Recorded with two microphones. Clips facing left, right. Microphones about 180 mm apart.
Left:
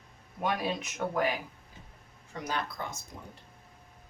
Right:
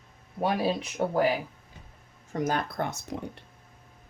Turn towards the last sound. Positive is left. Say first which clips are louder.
# right 11 dB
turn(degrees=-70)  # may be behind; listen again after turning